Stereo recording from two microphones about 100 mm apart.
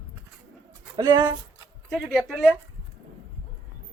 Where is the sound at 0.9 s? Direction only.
45° right (ahead or behind).